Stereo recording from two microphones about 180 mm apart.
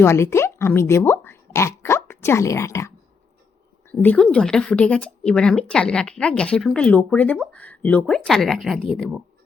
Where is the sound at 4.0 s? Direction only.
10° left (ahead or behind).